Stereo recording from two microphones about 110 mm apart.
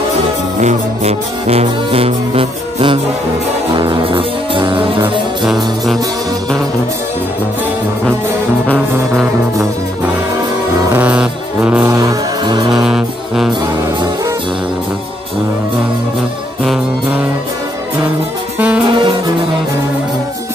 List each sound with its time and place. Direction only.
0.6 s music: 85° right; by 4.8 s 50° right (ahead or behind)
5.4 s music: 5° right (ahead or behind)
8.9 s music: 20° right (ahead or behind)
11.0 s music: 10° right (ahead or behind)
11.9 s music: 30° right (ahead or behind)
12.7 s music: 5° right (ahead or behind)
18.9 s music: 45° right (ahead or behind)